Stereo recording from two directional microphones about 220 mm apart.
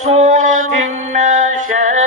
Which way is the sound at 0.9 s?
30° right (ahead or behind).